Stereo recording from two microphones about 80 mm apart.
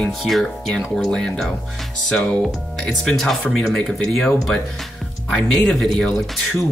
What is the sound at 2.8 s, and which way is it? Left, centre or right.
Speech, centre.